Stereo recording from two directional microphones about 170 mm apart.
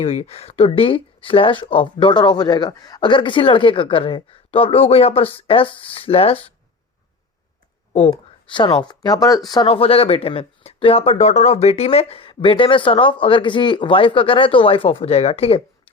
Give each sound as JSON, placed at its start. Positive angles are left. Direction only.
{"t": 0.0, "sound": "speech", "side_deg": 35}
{"t": 7.9, "sound": "speech", "side_deg": 30}